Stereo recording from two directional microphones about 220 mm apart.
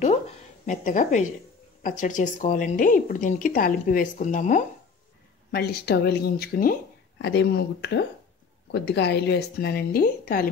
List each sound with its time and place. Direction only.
0.7 s speech: 35° left (ahead or behind)
5.5 s speech: 45° left (ahead or behind)